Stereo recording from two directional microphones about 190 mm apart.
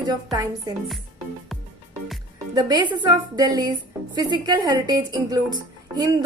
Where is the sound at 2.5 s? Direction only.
20° right (ahead or behind).